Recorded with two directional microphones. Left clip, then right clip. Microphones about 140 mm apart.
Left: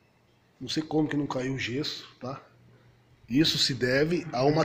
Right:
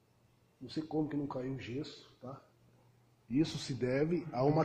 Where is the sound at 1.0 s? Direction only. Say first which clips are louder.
Left 8 dB; 25° left (ahead or behind).